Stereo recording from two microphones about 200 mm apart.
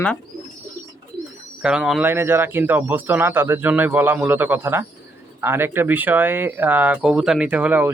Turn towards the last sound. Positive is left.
turn(degrees=-5)  # may be behind; listen again after turning